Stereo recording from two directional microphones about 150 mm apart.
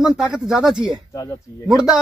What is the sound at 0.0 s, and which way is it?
Speech, 5° right (ahead or behind).